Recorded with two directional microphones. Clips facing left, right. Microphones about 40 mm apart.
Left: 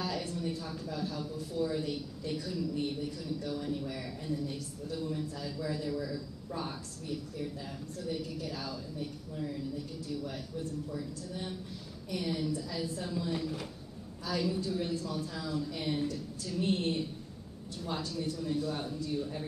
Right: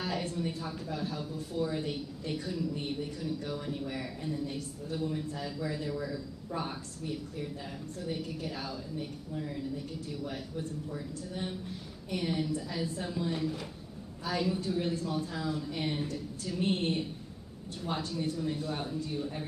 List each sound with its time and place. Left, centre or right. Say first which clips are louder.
0.0 s a man's voice: right 1 dB; right
10.0 s a man's voice: even; right
18.1 s speech: right 1 dB; right